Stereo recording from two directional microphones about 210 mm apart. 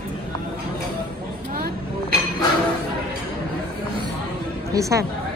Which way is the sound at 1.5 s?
45° right (ahead or behind).